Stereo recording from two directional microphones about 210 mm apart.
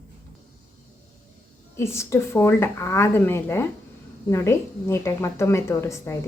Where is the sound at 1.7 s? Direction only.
15° left (ahead or behind).